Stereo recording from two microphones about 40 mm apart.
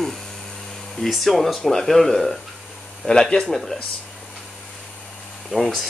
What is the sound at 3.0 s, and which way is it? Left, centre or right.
Speech, left.